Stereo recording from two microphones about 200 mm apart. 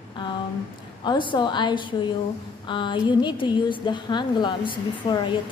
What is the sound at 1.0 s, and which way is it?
A woman's voice, 25° left (ahead or behind).